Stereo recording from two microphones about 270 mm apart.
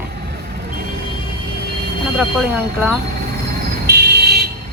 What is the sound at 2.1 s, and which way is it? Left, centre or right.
Speech, centre.